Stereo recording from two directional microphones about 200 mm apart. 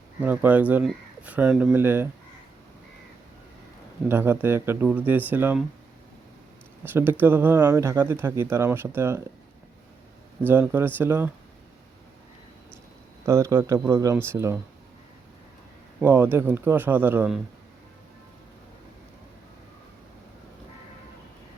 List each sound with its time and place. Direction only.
0.2 s speech: 10° right (ahead or behind)
4.1 s speech: 10° right (ahead or behind)
6.8 s speech: 10° right (ahead or behind)
10.4 s speech: 10° right (ahead or behind)
13.2 s speech: 15° right (ahead or behind)
16.0 s speech: 10° right (ahead or behind)